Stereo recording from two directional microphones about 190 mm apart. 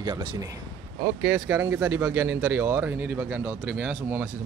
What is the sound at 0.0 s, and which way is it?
Speech, 20° right (ahead or behind).